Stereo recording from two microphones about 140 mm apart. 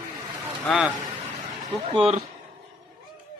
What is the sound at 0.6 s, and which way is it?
Speech, centre (ahead or behind).